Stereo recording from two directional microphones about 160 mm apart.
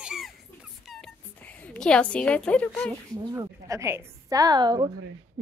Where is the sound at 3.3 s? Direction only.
20° right (ahead or behind).